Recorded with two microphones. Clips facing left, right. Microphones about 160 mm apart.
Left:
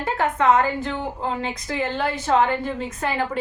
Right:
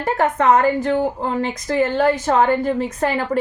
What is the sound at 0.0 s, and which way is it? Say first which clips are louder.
A woman's voice: right 3 dB; 40° right (ahead or behind).